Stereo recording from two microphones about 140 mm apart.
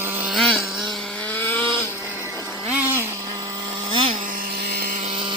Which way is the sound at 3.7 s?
40° right (ahead or behind).